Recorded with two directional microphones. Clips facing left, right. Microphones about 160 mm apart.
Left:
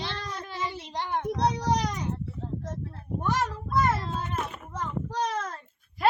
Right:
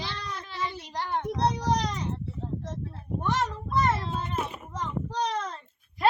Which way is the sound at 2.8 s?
Centre (ahead or behind).